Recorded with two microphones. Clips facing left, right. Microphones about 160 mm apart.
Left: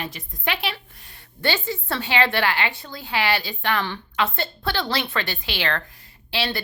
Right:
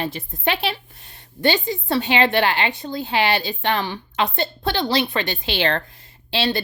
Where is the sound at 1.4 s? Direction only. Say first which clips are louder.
Right 5 dB; 20° right (ahead or behind).